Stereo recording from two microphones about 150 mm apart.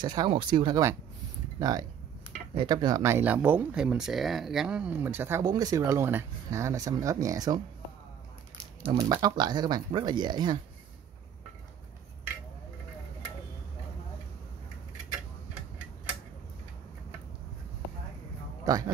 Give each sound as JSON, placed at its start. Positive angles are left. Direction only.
{"t": 0.0, "sound": "speech", "side_deg": -30}
{"t": 5.4, "sound": "speech", "side_deg": -25}
{"t": 8.9, "sound": "speech", "side_deg": -25}